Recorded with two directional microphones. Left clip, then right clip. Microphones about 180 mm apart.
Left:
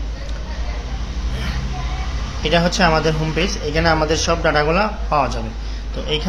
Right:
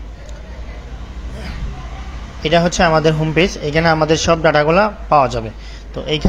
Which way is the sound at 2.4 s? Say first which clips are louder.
Right 3 dB; 30° right (ahead or behind).